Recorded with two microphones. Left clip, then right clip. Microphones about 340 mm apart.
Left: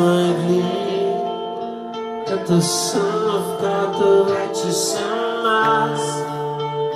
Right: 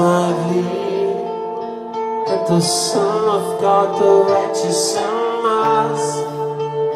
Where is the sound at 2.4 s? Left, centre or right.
Centre.